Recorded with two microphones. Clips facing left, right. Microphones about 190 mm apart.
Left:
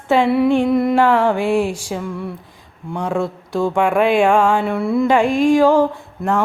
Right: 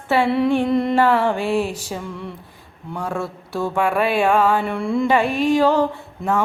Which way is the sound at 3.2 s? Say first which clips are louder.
Left 5 dB; 15° left (ahead or behind).